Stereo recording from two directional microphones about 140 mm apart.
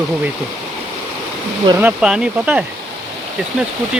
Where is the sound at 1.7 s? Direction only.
10° right (ahead or behind).